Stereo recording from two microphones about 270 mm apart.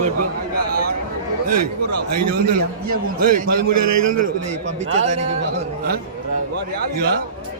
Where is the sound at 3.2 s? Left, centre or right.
Right.